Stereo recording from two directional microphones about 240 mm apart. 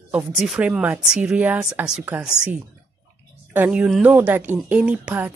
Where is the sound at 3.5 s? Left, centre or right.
Centre.